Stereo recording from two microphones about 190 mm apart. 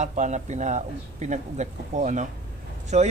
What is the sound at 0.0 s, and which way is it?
Speech, 40° right (ahead or behind).